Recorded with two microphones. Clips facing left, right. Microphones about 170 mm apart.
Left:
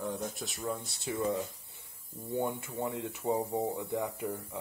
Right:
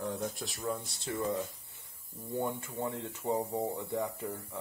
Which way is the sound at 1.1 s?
15° left (ahead or behind).